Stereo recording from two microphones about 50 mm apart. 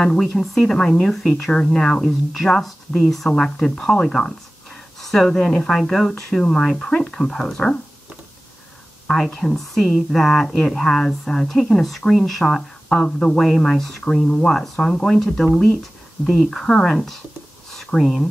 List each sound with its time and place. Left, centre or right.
0.0 s speech: centre
9.0 s speech: centre